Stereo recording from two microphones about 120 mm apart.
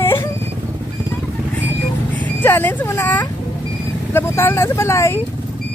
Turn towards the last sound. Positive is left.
turn(degrees=25)  # may be behind; listen again after turning